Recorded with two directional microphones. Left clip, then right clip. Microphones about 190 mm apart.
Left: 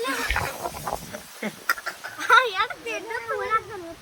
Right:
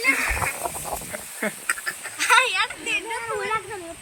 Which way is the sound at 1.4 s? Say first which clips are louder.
Right 5 dB; 5° left (ahead or behind).